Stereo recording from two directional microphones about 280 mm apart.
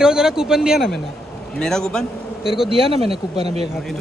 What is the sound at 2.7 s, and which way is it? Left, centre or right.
Speech, centre.